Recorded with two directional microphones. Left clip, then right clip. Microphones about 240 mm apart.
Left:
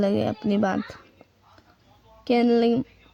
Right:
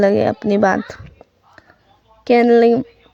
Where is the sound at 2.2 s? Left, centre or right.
Right.